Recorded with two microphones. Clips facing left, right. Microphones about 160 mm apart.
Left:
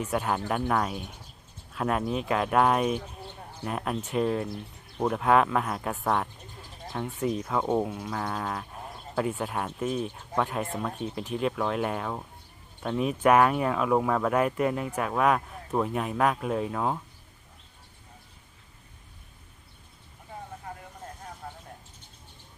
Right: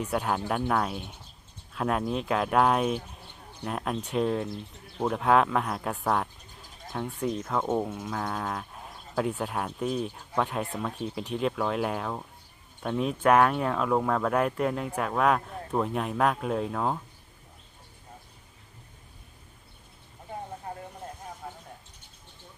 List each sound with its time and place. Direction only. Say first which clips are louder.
0.0 s speech: even; centre (ahead or behind)
20.7 s vehicle: right 2 dB; 30° right (ahead or behind)
21.4 s a sound: even; 5° right (ahead or behind)